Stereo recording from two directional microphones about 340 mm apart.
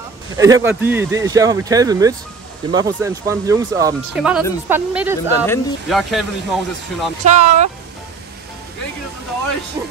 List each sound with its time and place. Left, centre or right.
0.4 s speech: centre
7.2 s speech: centre
9.8 s speech: centre